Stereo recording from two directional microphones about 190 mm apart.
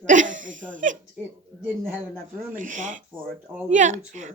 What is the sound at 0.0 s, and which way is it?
Speech, 40° right (ahead or behind).